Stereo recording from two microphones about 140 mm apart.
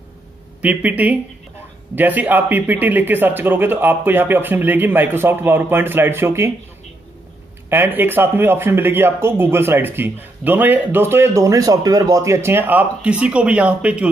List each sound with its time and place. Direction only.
0.6 s speech: 10° right (ahead or behind)
7.7 s speech: 15° right (ahead or behind)